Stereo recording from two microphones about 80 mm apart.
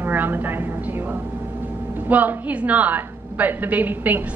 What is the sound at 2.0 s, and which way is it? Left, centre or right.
A woman's voice, right.